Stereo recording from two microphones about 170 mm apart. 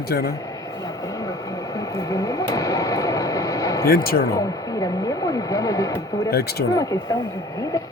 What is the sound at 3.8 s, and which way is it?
Speech, 60° left (ahead or behind).